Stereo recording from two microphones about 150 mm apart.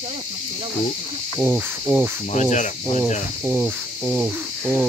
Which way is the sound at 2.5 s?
55° left (ahead or behind).